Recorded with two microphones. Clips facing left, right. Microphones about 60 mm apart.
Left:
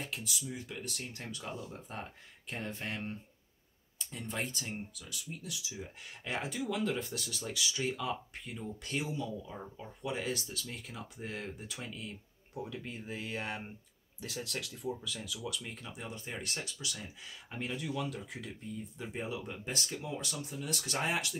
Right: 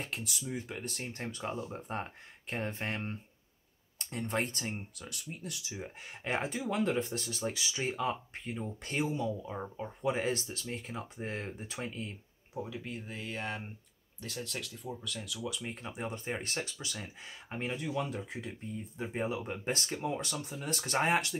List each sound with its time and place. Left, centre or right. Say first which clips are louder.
0.0 s speech: right 1 dB; right
1.8 s speech: right 5 dB; right
4.0 s speech: right 5 dB; right
5.4 s speech: right 2 dB; right
12.5 s speech: right 2 dB; centre
16.0 s speech: right 6 dB; right